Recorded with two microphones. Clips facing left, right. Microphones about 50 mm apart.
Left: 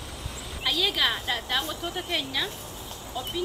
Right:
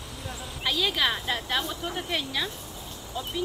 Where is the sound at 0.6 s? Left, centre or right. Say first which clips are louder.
Even; centre.